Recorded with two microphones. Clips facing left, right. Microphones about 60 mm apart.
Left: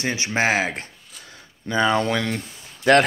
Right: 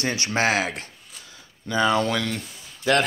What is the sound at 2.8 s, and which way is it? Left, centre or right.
Speech, left.